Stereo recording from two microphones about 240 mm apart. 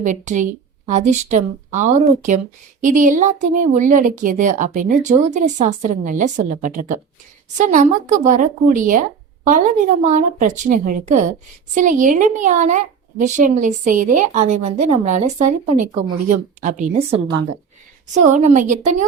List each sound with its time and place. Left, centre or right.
0.0 s speech: right